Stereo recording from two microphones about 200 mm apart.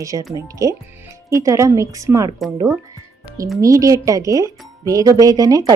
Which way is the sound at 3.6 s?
15° right (ahead or behind).